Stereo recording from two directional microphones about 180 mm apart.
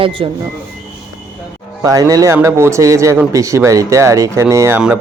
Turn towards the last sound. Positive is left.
turn(degrees=-10)  # may be behind; listen again after turning